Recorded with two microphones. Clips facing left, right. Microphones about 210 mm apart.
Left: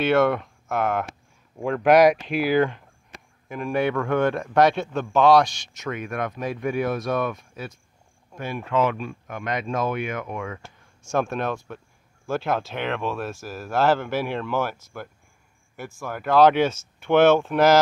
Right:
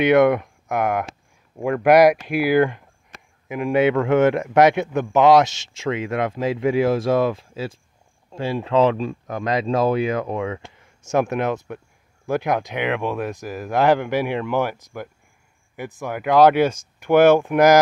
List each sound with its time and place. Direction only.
0.0 s speech: 15° right (ahead or behind)